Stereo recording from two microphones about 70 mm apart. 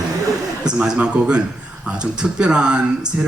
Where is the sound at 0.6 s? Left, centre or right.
Centre.